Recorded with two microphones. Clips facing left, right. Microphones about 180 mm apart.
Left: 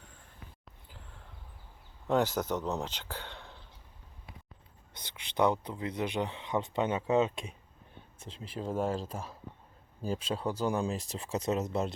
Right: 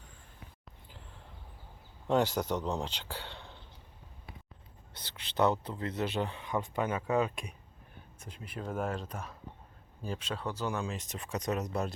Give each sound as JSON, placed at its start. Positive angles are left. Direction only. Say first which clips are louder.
{"t": 2.0, "sound": "speech", "louder": "even", "side_deg": -15}
{"t": 4.9, "sound": "speech", "louder": "left 1 dB", "side_deg": 10}
{"t": 10.4, "sound": "speech", "louder": "left 4 dB", "side_deg": 10}
{"t": 10.8, "sound": "speech", "louder": "left 4 dB", "side_deg": 35}